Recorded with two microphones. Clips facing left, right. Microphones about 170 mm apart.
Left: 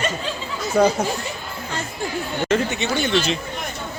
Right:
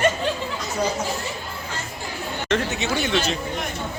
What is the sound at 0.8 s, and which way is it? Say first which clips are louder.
Speech: left 9 dB; 60° left (ahead or behind).